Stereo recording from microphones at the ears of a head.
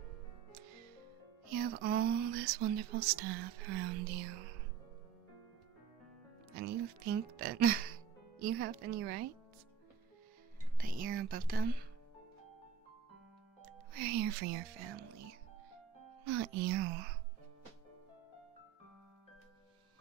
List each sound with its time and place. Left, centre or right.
0.5 s music: right
1.5 s speech: right
6.5 s speech: right
10.8 s speech: right
13.6 s speech: right